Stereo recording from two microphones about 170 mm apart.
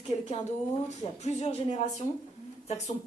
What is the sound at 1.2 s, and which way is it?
A woman's voice, 40° left (ahead or behind).